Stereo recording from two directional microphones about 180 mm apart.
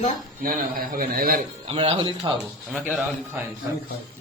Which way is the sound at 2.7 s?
10° right (ahead or behind).